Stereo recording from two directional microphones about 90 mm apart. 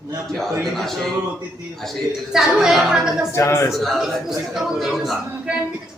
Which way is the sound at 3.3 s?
35° left (ahead or behind).